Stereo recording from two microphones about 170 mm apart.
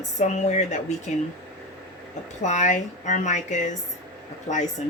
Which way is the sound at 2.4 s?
45° left (ahead or behind).